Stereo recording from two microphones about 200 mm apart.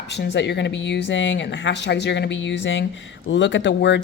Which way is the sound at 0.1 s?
60° left (ahead or behind).